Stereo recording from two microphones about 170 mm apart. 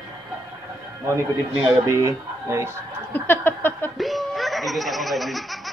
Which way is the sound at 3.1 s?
10° left (ahead or behind).